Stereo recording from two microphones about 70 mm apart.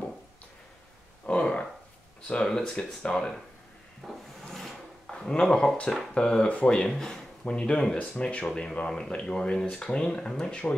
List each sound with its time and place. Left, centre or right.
1.2 s a sound: centre
2.2 s speech: centre
4.0 s speech: centre